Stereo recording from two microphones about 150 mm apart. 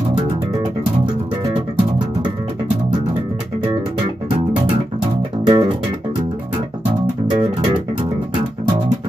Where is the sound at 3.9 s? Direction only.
35° right (ahead or behind).